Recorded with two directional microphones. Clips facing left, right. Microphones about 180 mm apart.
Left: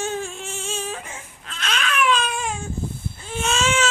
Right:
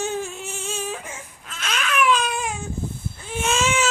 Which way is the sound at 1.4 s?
10° right (ahead or behind).